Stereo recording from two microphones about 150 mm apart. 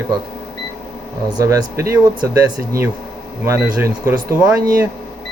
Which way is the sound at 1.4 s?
20° right (ahead or behind).